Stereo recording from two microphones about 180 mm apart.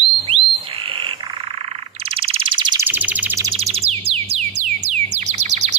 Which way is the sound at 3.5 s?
35° right (ahead or behind).